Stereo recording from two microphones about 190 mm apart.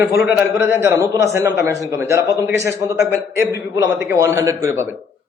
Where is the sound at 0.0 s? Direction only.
15° right (ahead or behind).